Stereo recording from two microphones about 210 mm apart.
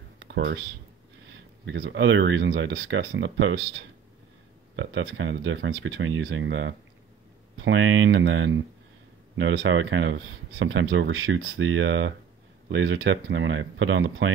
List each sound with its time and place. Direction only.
0.2 s computer keyboard: 55° right (ahead or behind)
1.7 s speech: 60° right (ahead or behind)